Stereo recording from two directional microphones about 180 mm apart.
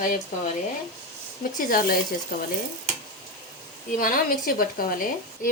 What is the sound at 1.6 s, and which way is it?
Speech, 55° left (ahead or behind).